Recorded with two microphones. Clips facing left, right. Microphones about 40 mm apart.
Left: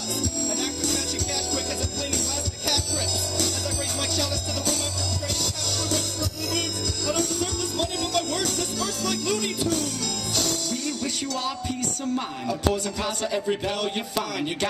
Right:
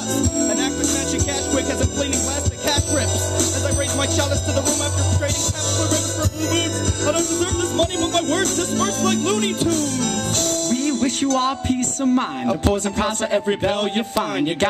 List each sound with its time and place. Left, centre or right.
0.2 s music: right
2.7 s music: right
7.1 s music: right
12.0 s speech: right